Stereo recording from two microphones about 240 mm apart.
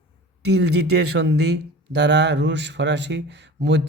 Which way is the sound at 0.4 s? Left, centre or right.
Right.